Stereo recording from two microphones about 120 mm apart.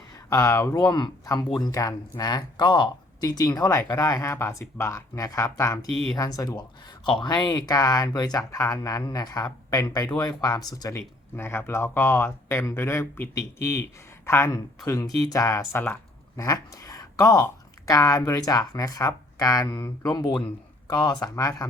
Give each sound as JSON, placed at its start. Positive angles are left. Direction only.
{"t": 0.3, "sound": "speech", "side_deg": 25}
{"t": 0.8, "sound": "speech", "side_deg": 40}
{"t": 5.9, "sound": "speech", "side_deg": 0}
{"t": 6.1, "sound": "speech", "side_deg": 30}
{"t": 11.3, "sound": "speech", "side_deg": 20}
{"t": 20.8, "sound": "speech", "side_deg": 40}